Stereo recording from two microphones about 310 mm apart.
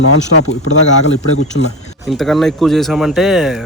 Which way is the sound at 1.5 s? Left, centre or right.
Left.